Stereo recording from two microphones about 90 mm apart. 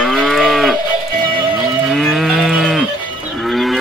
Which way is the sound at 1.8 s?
Centre (ahead or behind).